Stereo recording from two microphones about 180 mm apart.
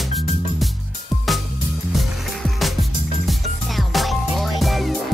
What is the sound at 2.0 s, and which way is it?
Music, centre (ahead or behind).